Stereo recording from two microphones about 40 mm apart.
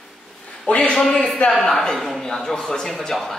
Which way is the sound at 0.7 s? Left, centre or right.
Left.